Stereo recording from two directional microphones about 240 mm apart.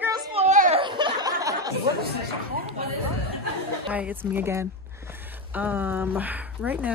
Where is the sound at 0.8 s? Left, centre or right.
Centre.